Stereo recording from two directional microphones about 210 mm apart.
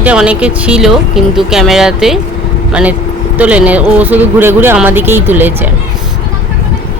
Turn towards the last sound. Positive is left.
turn(degrees=-10)  # may be behind; listen again after turning